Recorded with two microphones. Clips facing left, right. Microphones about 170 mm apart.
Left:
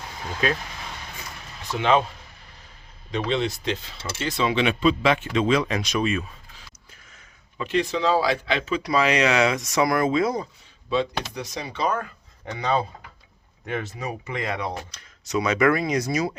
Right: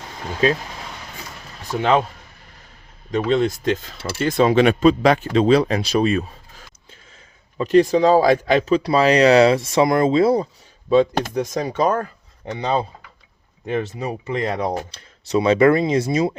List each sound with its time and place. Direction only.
3.1 s speech: 45° right (ahead or behind)
10.8 s speech: 45° right (ahead or behind)
12.5 s speech: 30° right (ahead or behind)